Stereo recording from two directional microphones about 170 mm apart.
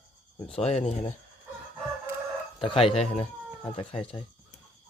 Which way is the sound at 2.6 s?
30° left (ahead or behind).